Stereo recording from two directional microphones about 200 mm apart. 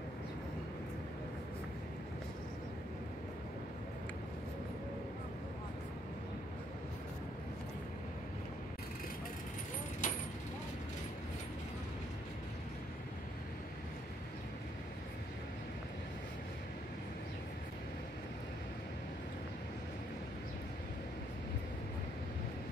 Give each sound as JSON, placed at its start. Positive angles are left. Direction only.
{"t": 10.0, "sound": "vehicle", "side_deg": 40}